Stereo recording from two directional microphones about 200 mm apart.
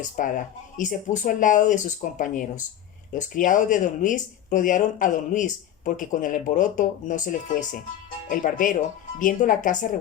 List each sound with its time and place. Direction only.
0.0 s speech: 40° left (ahead or behind)